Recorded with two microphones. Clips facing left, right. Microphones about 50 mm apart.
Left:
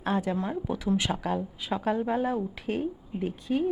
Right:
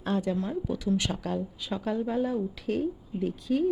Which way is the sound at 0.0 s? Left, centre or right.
Centre.